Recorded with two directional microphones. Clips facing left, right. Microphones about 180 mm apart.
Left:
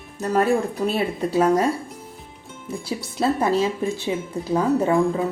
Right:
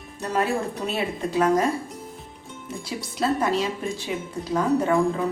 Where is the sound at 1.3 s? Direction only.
30° left (ahead or behind).